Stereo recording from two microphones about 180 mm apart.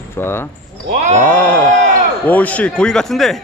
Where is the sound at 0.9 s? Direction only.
40° right (ahead or behind).